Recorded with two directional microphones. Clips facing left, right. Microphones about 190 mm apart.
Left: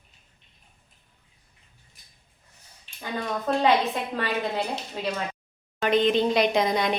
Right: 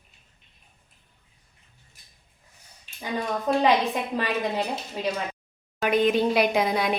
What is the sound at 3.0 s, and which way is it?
A woman's voice, 15° right (ahead or behind).